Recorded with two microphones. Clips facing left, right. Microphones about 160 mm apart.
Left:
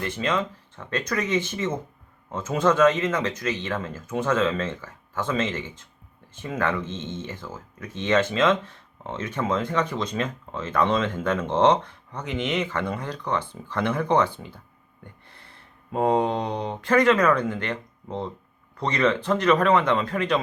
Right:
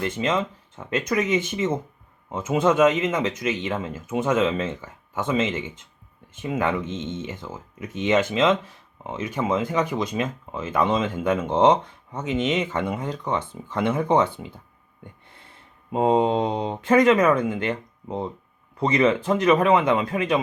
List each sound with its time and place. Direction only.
0.0 s speech: 20° right (ahead or behind)
12.5 s speech: 25° right (ahead or behind)
12.8 s speech: 15° right (ahead or behind)
15.9 s speech: 20° right (ahead or behind)